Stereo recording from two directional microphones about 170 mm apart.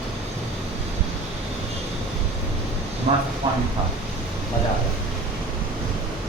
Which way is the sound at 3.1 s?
40° right (ahead or behind).